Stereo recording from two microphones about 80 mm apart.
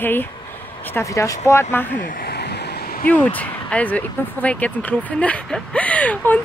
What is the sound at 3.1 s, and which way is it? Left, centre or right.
Speech, centre.